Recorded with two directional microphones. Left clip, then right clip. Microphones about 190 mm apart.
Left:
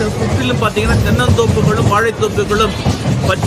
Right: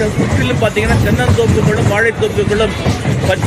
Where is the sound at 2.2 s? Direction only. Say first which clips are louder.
Even; 15° left (ahead or behind).